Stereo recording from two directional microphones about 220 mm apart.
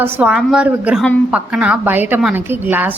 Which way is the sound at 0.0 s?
10° right (ahead or behind).